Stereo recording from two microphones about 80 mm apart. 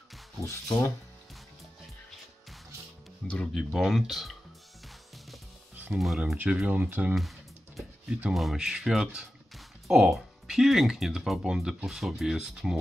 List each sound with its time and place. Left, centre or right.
0.4 s speech: left
3.2 s speech: centre
3.5 s speech: centre
5.9 s speech: centre
6.3 s speech: right
7.2 s music: centre
8.3 s speech: centre